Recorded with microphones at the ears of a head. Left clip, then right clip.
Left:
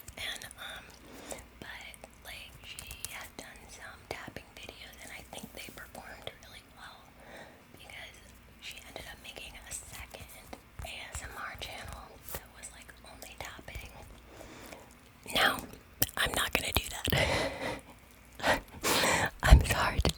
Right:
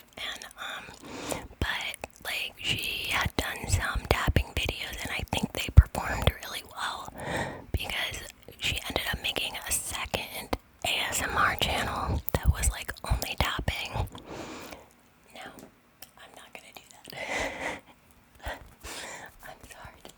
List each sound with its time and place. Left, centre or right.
0.6 s whispering: right
15.3 s whispering: left
18.3 s whispering: left